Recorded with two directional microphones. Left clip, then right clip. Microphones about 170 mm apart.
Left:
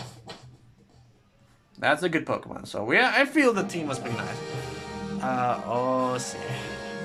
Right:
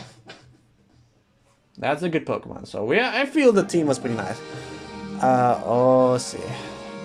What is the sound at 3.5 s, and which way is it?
Speech, 35° right (ahead or behind).